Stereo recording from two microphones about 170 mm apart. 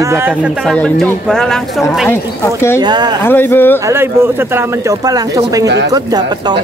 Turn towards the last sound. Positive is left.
turn(degrees=-20)  # may be behind; listen again after turning